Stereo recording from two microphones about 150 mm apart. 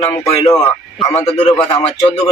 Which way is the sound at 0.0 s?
15° left (ahead or behind).